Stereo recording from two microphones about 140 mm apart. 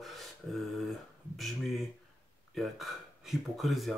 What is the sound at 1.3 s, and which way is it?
Speech, centre (ahead or behind).